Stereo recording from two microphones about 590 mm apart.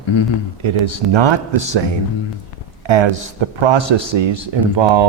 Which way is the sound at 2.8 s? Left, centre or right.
Right.